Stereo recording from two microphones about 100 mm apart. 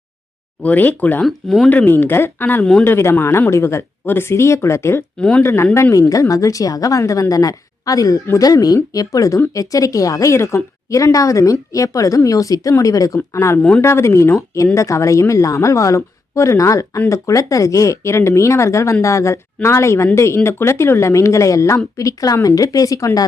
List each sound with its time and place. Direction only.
0.6 s speech: 15° left (ahead or behind)
1.2 s speech: centre (ahead or behind)
1.7 s speech: 20° left (ahead or behind)
13.6 s speech: 5° left (ahead or behind)
13.8 s speech: 30° left (ahead or behind)